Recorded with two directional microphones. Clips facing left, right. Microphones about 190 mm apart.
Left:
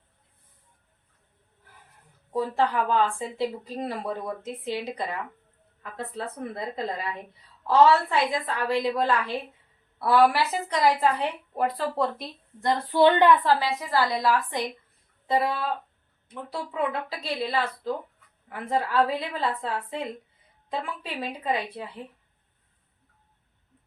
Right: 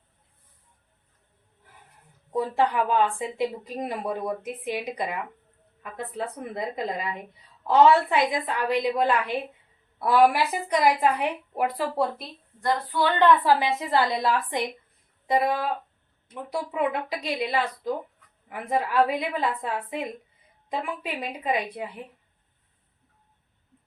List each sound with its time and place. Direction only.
2.3 s speech: 15° right (ahead or behind)
12.5 s speech: 25° left (ahead or behind)
13.4 s a woman's voice: 15° right (ahead or behind)